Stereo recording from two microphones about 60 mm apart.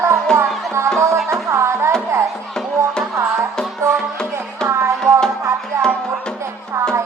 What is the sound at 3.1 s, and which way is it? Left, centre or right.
Music, right.